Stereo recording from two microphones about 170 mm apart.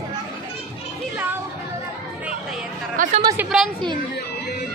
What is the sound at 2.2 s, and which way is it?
Chatter, 5° right (ahead or behind).